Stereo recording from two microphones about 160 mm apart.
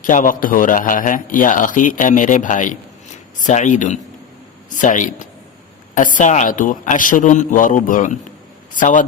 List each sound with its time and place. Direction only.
0.0 s a man's voice: 55° left (ahead or behind)